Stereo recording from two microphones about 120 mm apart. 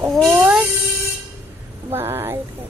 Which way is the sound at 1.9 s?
20° right (ahead or behind).